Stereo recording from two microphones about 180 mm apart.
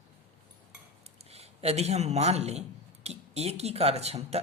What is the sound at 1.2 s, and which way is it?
A man's voice, 35° right (ahead or behind).